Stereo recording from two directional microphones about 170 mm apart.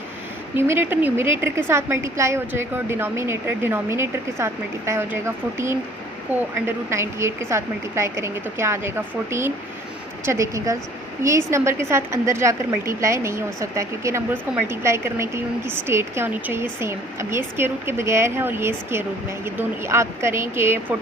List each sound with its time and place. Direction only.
0.5 s a woman's voice: 15° right (ahead or behind)